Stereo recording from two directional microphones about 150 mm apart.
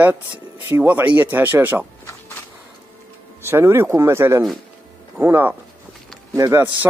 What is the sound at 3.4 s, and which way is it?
Speech, 15° right (ahead or behind).